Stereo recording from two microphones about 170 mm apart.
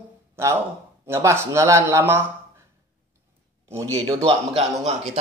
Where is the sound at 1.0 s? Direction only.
15° right (ahead or behind).